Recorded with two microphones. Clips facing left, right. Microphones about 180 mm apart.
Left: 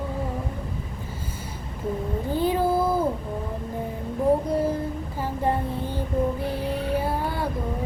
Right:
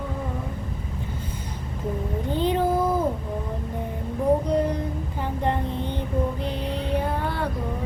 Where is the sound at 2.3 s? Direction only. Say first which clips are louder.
Even; 10° left (ahead or behind).